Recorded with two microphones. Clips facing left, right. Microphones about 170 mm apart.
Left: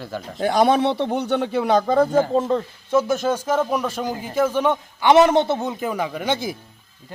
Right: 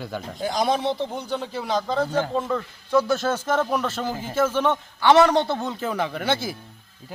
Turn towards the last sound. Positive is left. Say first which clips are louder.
# left 1 dB
turn(degrees=15)  # may be behind; listen again after turning